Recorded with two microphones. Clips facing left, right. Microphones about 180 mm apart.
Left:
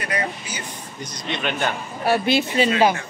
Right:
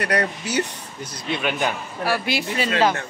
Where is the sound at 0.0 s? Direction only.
70° right (ahead or behind).